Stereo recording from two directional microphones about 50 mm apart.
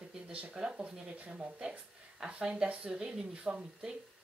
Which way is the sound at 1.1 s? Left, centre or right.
Right.